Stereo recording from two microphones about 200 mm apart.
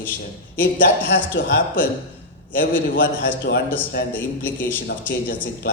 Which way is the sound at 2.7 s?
65° left (ahead or behind).